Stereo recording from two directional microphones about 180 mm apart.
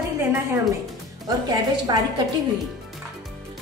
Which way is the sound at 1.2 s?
20° right (ahead or behind).